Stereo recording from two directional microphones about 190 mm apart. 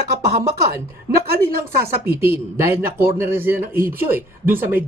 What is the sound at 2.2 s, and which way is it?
A man's voice, 15° right (ahead or behind).